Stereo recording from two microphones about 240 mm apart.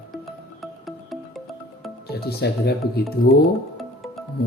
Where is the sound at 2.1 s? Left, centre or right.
Left.